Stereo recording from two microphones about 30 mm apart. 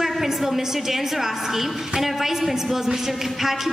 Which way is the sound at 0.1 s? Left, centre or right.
Centre.